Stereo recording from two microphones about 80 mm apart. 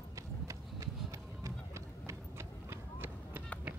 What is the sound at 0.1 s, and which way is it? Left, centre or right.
Run, right.